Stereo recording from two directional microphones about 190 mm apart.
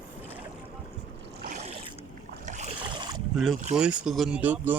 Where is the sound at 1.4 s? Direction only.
40° right (ahead or behind).